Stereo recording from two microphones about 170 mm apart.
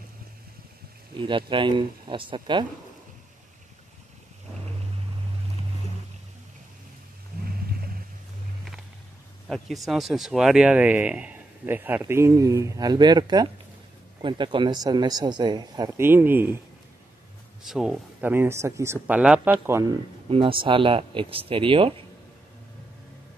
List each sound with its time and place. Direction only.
1.1 s speech: 30° right (ahead or behind)
9.5 s speech: centre (ahead or behind); by 15.9 s 25° right (ahead or behind)
15.9 s speech: 15° right (ahead or behind)
17.6 s speech: 5° right (ahead or behind)
20.2 s speech: 30° right (ahead or behind)